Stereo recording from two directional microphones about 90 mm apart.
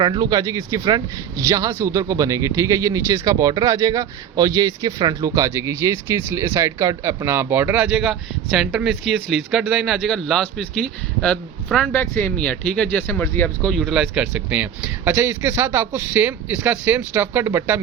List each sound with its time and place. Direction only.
0.0 s a man's voice: 55° right (ahead or behind)
5.3 s speech: 35° right (ahead or behind); by 11.9 s 10° left (ahead or behind)
11.9 s speech: 25° left (ahead or behind)
13.7 s speech: centre (ahead or behind); by 17.7 s 25° right (ahead or behind)